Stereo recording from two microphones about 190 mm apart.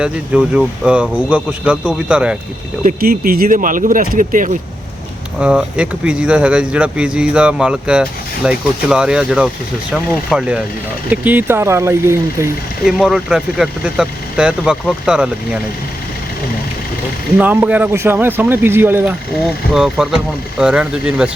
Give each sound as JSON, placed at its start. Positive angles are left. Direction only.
{"t": 0.0, "sound": "speech", "side_deg": -5}
{"t": 2.8, "sound": "speech", "side_deg": -50}
{"t": 5.4, "sound": "speech", "side_deg": -5}
{"t": 12.8, "sound": "speech", "side_deg": -5}
{"t": 17.3, "sound": "speech", "side_deg": -10}